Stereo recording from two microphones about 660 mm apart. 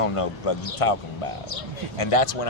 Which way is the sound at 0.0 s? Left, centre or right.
Left.